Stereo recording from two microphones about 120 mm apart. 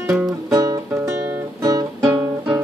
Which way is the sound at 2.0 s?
15° right (ahead or behind).